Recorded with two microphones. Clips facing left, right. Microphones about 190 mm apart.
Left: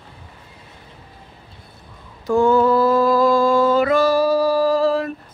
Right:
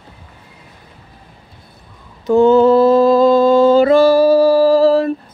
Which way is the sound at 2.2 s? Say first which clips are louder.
Right 6 dB; 20° right (ahead or behind).